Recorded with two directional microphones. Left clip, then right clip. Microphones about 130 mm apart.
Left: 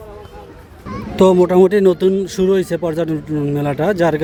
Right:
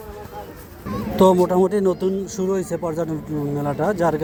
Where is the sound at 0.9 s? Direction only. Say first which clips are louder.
Even; 10° left (ahead or behind).